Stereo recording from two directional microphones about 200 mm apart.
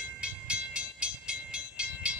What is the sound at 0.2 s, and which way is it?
Train, 5° right (ahead or behind).